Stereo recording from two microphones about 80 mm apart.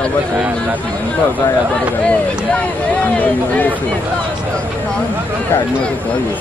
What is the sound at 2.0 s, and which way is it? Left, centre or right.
Speech, centre.